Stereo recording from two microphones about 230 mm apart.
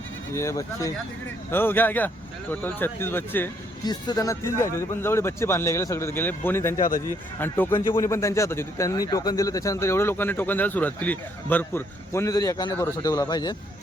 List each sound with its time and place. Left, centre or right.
0.3 s speech: centre